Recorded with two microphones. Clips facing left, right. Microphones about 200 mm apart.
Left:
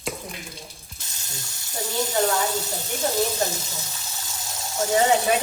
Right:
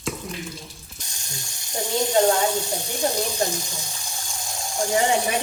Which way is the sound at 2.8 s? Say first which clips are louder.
Left 3 dB; 20° left (ahead or behind).